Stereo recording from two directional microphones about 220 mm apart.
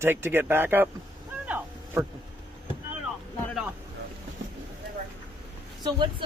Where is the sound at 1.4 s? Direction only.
5° right (ahead or behind).